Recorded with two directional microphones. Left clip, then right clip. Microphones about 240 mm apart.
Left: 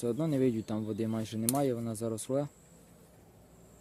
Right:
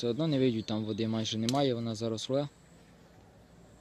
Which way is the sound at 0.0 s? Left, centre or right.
Centre.